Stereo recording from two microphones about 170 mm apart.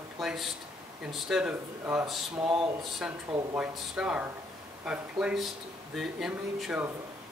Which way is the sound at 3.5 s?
5° right (ahead or behind).